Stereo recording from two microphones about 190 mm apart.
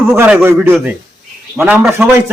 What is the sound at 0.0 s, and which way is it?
A man's voice, 10° right (ahead or behind).